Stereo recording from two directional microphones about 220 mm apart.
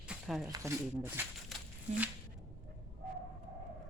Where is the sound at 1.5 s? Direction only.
Centre (ahead or behind).